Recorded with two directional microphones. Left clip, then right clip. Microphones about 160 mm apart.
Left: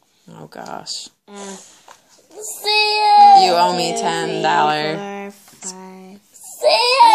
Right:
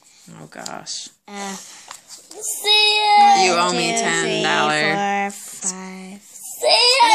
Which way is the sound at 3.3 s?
15° left (ahead or behind).